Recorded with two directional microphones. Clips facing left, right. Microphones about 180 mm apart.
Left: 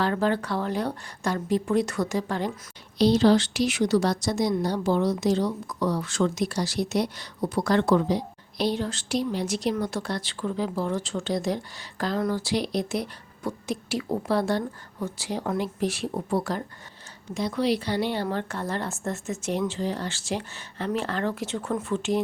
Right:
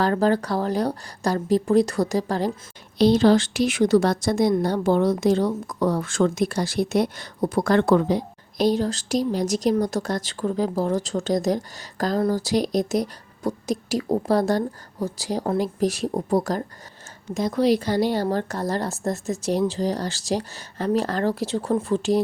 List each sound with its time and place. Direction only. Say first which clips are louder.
0.0 s a woman's voice: right 4 dB; 40° right (ahead or behind)
3.0 s a woman's voice: right 3 dB; 50° right (ahead or behind); by 22.2 s 35° right (ahead or behind)